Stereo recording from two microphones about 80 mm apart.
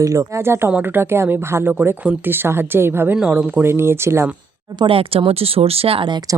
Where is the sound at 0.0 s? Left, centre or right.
Right.